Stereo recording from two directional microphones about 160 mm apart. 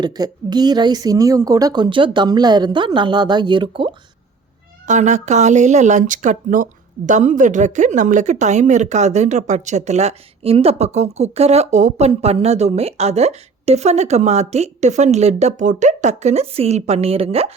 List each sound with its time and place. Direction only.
0.0 s a woman's voice: 25° right (ahead or behind)
4.9 s speech: 50° right (ahead or behind)